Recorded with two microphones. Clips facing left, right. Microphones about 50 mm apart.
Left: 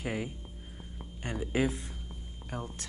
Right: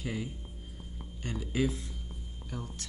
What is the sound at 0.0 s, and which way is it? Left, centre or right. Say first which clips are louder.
Speech: left 2 dB; left.